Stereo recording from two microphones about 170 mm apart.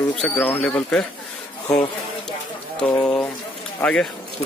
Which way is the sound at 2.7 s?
5° left (ahead or behind).